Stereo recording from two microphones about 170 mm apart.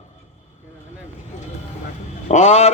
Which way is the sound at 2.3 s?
40° left (ahead or behind).